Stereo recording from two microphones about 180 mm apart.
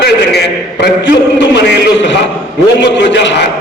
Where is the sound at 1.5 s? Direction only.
80° left.